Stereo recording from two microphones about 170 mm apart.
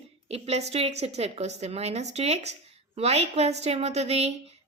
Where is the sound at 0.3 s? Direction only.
35° right (ahead or behind).